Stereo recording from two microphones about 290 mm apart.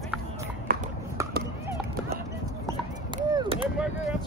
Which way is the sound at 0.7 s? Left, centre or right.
Right.